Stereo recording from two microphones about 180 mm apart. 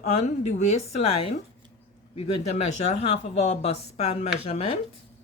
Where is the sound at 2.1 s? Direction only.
40° left (ahead or behind).